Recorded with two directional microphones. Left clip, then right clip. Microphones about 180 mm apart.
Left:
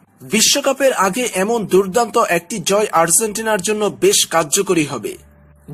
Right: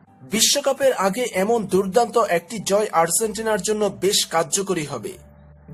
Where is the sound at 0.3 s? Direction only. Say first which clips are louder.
Left 4 dB; 15° left (ahead or behind).